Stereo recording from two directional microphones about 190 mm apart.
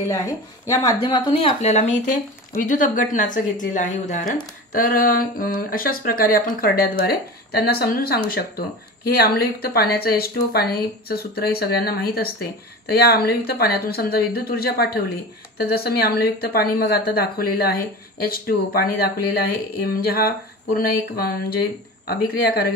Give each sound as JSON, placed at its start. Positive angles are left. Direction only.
{"t": 0.1, "sound": "speech", "side_deg": 15}